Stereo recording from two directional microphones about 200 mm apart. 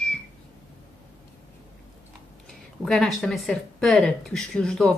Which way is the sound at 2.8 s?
Centre (ahead or behind).